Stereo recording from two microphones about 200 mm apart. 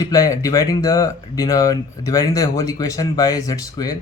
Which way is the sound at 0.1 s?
15° left (ahead or behind).